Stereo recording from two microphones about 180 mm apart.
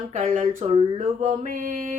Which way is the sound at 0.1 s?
45° right (ahead or behind).